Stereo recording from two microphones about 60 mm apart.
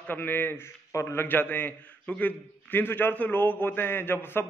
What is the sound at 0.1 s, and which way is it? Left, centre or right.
A man's voice, left.